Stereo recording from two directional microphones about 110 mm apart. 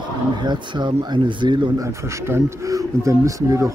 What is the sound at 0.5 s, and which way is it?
Speech, 45° right (ahead or behind).